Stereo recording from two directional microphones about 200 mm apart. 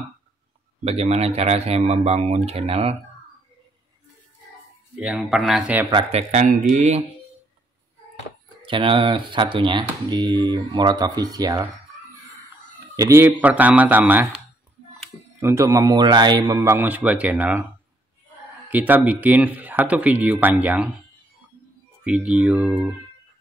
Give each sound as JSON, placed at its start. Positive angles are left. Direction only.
{"t": 0.8, "sound": "speech", "side_deg": -30}
{"t": 4.9, "sound": "speech", "side_deg": -5}
{"t": 5.9, "sound": "speech", "side_deg": -25}
{"t": 6.7, "sound": "speech", "side_deg": -35}
{"t": 8.6, "sound": "speech", "side_deg": -25}
{"t": 12.9, "sound": "speech", "side_deg": -15}
{"t": 15.4, "sound": "speech", "side_deg": -15}
{"t": 18.7, "sound": "speech", "side_deg": -10}
{"t": 22.0, "sound": "speech", "side_deg": -5}